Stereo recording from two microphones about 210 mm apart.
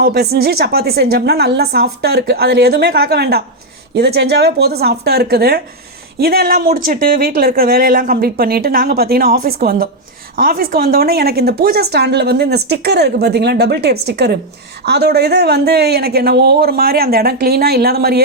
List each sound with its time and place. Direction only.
0.0 s a woman's voice: 50° right (ahead or behind)